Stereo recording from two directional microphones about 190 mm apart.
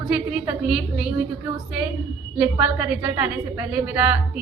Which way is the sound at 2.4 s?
5° right (ahead or behind).